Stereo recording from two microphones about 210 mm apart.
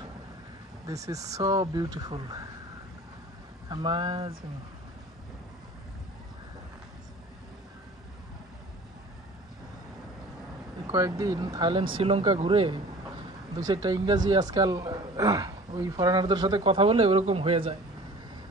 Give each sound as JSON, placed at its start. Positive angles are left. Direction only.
{"t": 0.8, "sound": "speech", "side_deg": -15}
{"t": 3.6, "sound": "a woman's voice", "side_deg": -20}
{"t": 10.9, "sound": "a woman's voice", "side_deg": -15}